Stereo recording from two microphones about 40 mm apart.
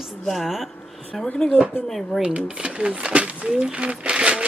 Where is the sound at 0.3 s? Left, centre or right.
Centre.